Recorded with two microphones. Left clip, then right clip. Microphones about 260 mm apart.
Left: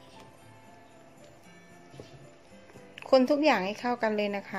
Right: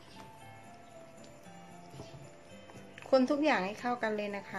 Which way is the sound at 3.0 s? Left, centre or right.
Left.